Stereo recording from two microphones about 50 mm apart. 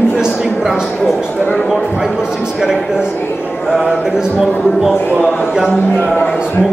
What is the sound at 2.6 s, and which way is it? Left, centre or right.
Speech, centre.